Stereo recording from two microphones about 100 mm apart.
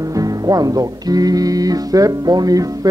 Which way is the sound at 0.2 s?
40° right (ahead or behind).